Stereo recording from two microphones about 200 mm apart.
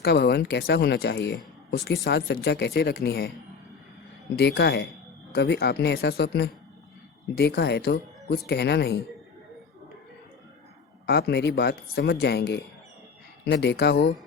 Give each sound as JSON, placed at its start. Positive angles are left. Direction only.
{"t": 0.0, "sound": "speech", "side_deg": 55}
{"t": 4.4, "sound": "speech", "side_deg": 55}
{"t": 11.0, "sound": "speech", "side_deg": 55}